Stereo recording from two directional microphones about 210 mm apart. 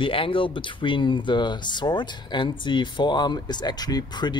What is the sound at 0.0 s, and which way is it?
Speech, 25° left (ahead or behind).